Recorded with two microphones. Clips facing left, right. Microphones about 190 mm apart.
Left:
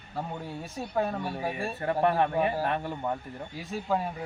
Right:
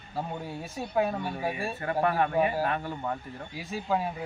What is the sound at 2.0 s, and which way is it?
A man's voice, 25° left (ahead or behind).